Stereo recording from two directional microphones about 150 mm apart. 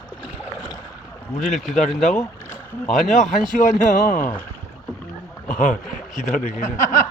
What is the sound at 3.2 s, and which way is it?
Speech, 55° left (ahead or behind).